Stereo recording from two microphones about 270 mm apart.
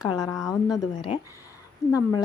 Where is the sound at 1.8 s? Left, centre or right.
Centre.